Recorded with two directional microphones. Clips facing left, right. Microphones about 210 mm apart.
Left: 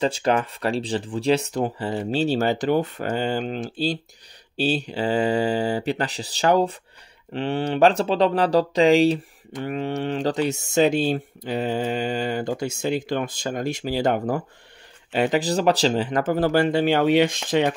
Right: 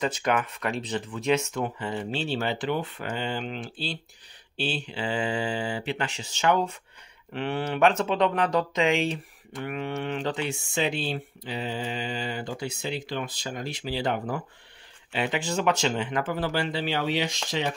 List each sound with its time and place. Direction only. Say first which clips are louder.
0.0 s speech: left 5 dB; 30° left (ahead or behind); by 17.7 s 55° left (ahead or behind)